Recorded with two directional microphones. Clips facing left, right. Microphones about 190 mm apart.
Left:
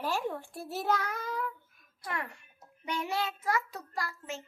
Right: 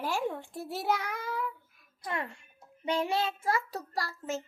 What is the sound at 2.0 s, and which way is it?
Speech, 20° right (ahead or behind).